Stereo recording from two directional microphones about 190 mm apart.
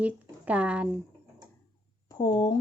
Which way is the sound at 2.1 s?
25° left (ahead or behind).